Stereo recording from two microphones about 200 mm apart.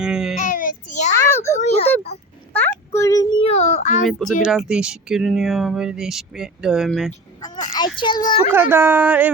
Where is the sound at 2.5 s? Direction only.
10° left (ahead or behind).